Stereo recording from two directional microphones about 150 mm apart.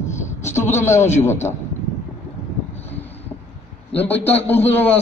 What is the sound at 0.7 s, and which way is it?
Speech, 20° left (ahead or behind).